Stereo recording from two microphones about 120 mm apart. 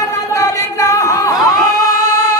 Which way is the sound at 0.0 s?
25° left (ahead or behind).